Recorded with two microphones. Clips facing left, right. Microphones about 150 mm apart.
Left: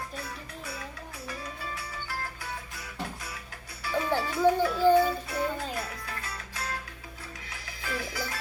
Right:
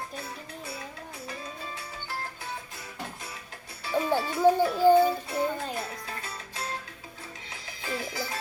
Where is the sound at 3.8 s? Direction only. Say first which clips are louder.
Right 2 dB; 25° right (ahead or behind).